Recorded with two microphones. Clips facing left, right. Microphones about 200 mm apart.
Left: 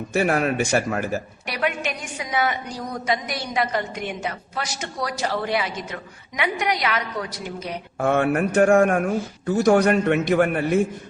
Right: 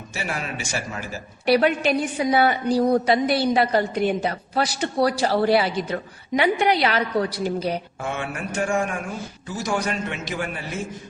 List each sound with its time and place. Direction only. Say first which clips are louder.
0.1 s a man's voice: left 10 dB; 55° left (ahead or behind)
1.5 s a woman's voice: right 8 dB; 35° right (ahead or behind)
7.9 s a man's voice: left 9 dB; 55° left (ahead or behind)